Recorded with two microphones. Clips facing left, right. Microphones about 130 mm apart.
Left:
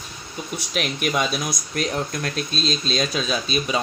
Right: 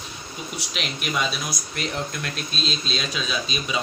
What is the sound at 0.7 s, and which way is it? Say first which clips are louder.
Speech: left 5 dB; 50° left (ahead or behind).